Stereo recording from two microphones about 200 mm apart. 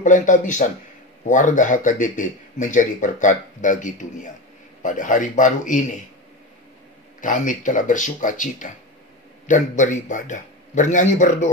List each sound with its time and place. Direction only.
0.0 s speech: 40° left (ahead or behind)
7.2 s speech: 40° left (ahead or behind)